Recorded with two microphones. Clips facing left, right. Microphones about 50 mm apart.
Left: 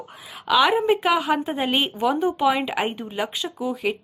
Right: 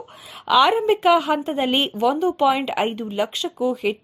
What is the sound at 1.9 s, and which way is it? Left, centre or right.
Speech, centre.